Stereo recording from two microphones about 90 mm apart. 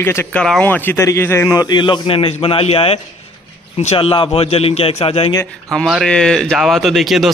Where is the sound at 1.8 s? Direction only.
75° left (ahead or behind); by 3.0 s 90° left.